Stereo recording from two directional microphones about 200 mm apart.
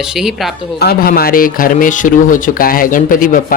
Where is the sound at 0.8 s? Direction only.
50° left (ahead or behind).